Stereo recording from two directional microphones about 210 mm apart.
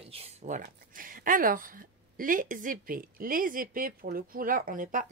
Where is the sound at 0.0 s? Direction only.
30° right (ahead or behind).